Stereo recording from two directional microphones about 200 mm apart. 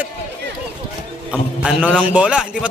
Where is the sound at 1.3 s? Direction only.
5° right (ahead or behind).